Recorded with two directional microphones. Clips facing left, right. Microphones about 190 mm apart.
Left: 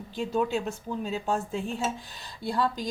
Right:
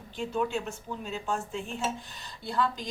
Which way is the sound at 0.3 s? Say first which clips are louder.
Left 3 dB; 35° left (ahead or behind).